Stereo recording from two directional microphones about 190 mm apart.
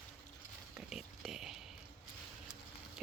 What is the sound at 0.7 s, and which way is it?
Speech, centre (ahead or behind).